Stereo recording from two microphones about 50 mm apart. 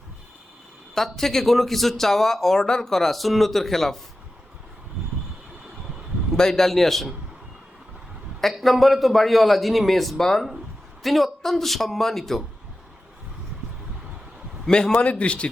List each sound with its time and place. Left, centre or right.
0.9 s speech: centre
6.3 s speech: centre
8.4 s speech: centre
14.7 s speech: centre